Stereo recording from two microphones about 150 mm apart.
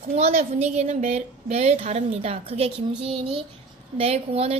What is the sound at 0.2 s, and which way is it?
A child's voice, 45° right (ahead or behind).